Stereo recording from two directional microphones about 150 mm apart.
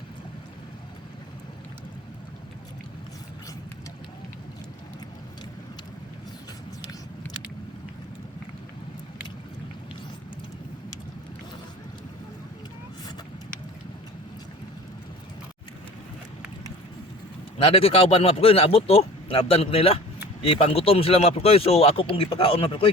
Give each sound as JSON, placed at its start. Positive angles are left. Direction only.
{"t": 17.6, "sound": "speech", "side_deg": 35}